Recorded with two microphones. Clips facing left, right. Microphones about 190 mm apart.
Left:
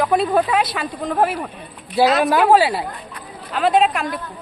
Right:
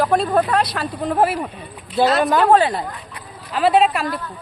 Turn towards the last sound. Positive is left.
turn(degrees=0)  # may be behind; listen again after turning